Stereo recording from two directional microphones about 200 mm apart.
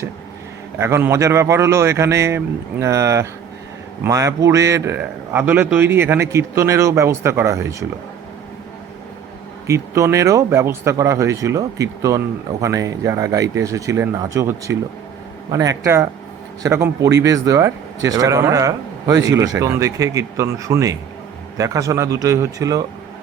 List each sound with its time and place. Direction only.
0.8 s speech: 15° right (ahead or behind)
9.6 s speech: 15° right (ahead or behind)